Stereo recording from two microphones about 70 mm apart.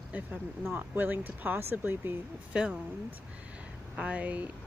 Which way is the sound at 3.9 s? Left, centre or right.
Centre.